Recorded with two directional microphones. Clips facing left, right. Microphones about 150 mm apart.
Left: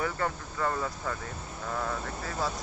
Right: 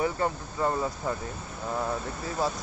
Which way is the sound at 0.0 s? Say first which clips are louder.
Right 4 dB; 20° right (ahead or behind).